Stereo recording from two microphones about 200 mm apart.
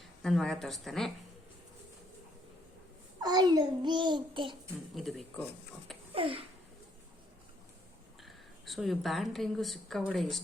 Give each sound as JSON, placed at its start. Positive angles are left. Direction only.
{"t": 0.0, "sound": "speech", "side_deg": 0}
{"t": 3.2, "sound": "a child's voice", "side_deg": -20}
{"t": 4.9, "sound": "speech", "side_deg": 0}
{"t": 6.1, "sound": "a child's voice", "side_deg": -30}
{"t": 8.2, "sound": "a woman's voice", "side_deg": 0}